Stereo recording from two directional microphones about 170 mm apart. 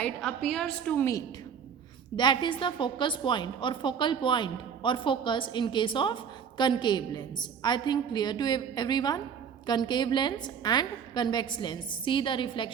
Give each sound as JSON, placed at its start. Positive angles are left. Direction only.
{"t": 0.0, "sound": "a woman's voice", "side_deg": 5}
{"t": 2.1, "sound": "a woman's voice", "side_deg": 25}